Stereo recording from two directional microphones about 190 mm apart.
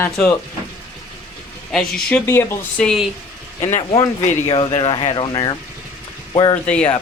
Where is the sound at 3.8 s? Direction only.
20° left (ahead or behind).